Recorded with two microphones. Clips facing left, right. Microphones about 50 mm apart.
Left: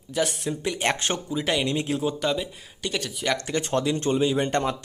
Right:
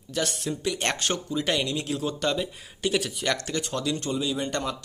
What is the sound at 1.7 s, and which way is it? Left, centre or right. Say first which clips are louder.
Speech: left 3 dB; left.